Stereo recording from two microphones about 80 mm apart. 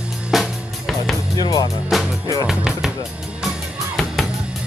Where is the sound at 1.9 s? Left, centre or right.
Centre.